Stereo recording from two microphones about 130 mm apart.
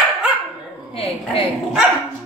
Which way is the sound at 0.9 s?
45° left (ahead or behind).